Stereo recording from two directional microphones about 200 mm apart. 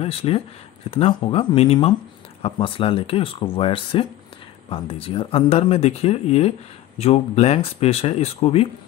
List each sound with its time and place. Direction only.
0.0 s speech: 30° left (ahead or behind)